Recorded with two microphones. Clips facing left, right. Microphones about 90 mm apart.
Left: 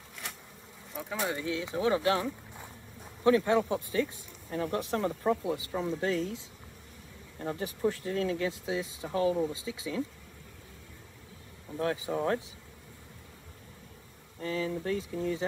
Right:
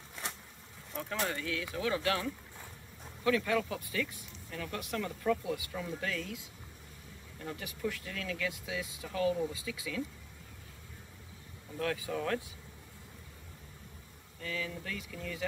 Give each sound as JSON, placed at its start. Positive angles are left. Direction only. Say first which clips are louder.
{"t": 0.9, "sound": "speech", "louder": "left 2 dB", "side_deg": 5}
{"t": 1.3, "sound": "speech", "louder": "left 4 dB", "side_deg": 20}
{"t": 11.7, "sound": "speech", "louder": "left 4 dB", "side_deg": 25}
{"t": 14.4, "sound": "speech", "louder": "left 7 dB", "side_deg": 35}